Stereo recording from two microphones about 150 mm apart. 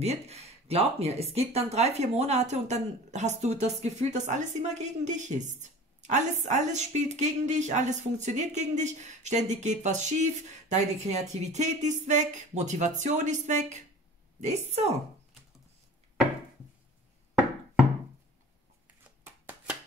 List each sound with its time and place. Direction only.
0.0 s a woman's voice: 45° right (ahead or behind)
19.0 s shuffling cards: 10° right (ahead or behind)